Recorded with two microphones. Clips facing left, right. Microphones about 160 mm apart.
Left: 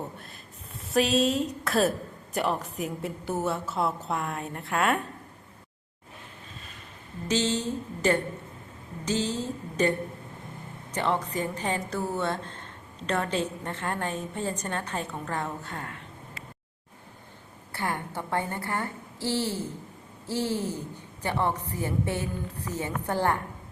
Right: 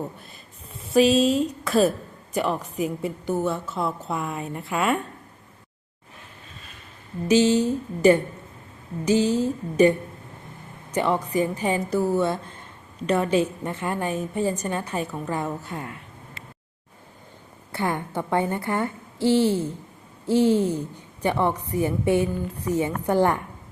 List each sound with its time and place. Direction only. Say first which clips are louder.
0.9 s a woman's voice: right 6 dB; centre (ahead or behind)
7.3 s a woman's voice: right 9 dB; 10° right (ahead or behind)
10.9 s a woman's voice: right 5 dB; 10° right (ahead or behind)
17.7 s a woman's voice: right 5 dB; 20° right (ahead or behind)